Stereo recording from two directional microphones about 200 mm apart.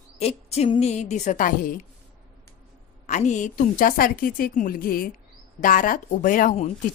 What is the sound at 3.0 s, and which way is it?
Speech, 35° left (ahead or behind).